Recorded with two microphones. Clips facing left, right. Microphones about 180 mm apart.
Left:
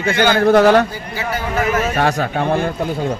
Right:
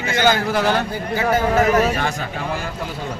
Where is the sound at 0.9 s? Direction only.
50° right (ahead or behind).